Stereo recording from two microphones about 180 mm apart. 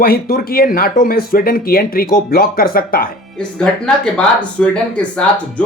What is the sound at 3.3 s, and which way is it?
Speech, 5° left (ahead or behind).